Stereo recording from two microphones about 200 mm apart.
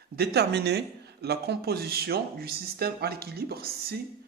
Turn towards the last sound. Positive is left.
turn(degrees=-50)  # may be behind; listen again after turning